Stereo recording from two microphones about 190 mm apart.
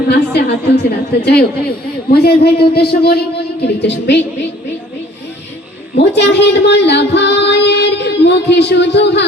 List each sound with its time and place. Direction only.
0.1 s a woman's voice: 60° left (ahead or behind)
5.9 s speech: 60° left (ahead or behind)